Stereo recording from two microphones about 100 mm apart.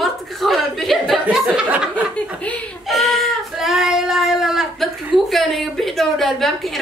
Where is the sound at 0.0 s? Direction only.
Centre (ahead or behind).